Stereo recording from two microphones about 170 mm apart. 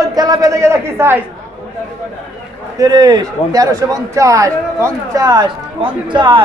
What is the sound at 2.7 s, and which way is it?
Speech, 20° right (ahead or behind).